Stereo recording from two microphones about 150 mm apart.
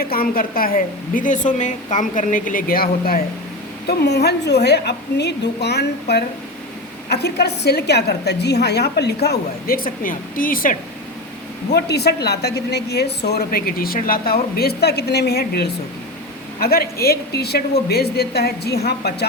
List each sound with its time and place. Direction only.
0.0 s a woman's voice: 80° left
11.7 s a woman's voice: 90° left